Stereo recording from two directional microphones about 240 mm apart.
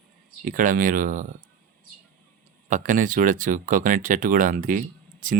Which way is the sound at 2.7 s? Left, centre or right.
Right.